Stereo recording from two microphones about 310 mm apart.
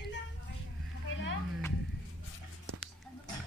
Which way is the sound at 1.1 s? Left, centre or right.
Left.